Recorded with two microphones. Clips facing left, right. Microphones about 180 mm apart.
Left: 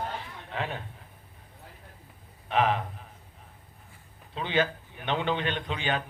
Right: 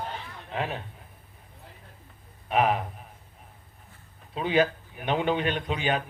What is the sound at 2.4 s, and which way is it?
Speech, 10° right (ahead or behind).